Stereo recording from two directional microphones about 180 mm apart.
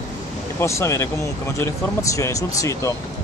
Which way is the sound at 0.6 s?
15° left (ahead or behind).